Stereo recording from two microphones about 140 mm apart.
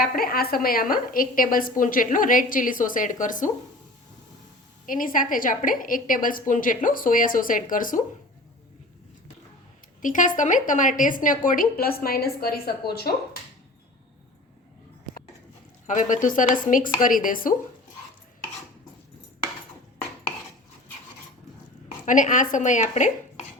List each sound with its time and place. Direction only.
0.0 s a woman's voice: 90° left; by 3.5 s 65° left (ahead or behind)
4.9 s a woman's voice: 75° left (ahead or behind)
10.0 s a woman's voice: 70° left (ahead or behind); by 13.1 s 90° left
15.9 s a woman's voice: 70° left (ahead or behind)
22.0 s a woman's voice: 65° left (ahead or behind)